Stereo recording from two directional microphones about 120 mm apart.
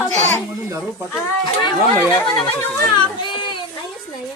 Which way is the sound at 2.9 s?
40° left (ahead or behind).